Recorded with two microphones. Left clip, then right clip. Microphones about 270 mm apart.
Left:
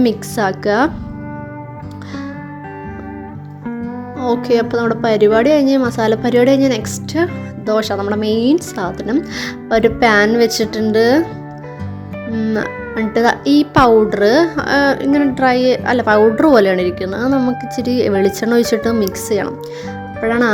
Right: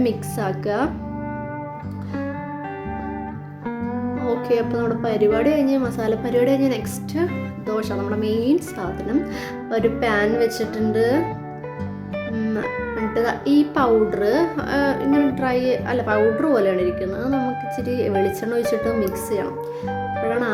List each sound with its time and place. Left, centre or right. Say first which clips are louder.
0.0 s a woman's voice: left 7 dB; left
4.4 s a woman's voice: left 6 dB; left
12.4 s a woman's voice: left 7 dB; left